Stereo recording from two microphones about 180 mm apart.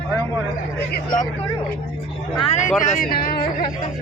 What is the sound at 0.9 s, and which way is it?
Speech, 50° left (ahead or behind).